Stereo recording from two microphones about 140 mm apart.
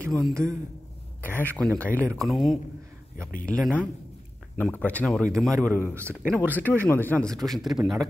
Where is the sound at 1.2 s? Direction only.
15° left (ahead or behind).